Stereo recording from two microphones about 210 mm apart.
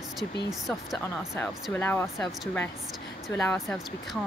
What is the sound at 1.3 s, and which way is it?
Speech, 10° left (ahead or behind).